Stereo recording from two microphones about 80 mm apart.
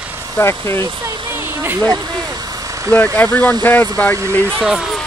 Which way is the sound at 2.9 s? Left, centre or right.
Centre.